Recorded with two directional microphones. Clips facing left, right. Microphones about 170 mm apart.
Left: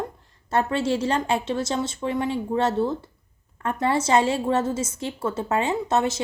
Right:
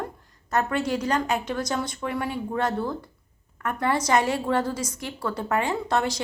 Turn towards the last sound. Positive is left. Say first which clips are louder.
# left 2 dB
turn(degrees=25)  # may be behind; listen again after turning